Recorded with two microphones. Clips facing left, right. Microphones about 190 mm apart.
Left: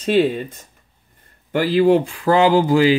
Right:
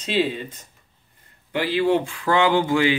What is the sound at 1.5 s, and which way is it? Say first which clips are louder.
Speech: left 6 dB; 40° left (ahead or behind).